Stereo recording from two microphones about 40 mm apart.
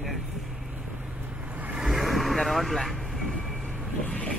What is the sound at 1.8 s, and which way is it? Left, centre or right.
Vehicle, centre.